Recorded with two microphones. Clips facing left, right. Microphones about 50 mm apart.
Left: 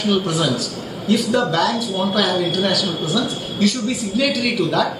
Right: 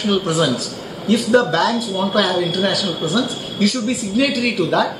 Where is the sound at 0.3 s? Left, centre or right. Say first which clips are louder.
Right 2 dB; centre.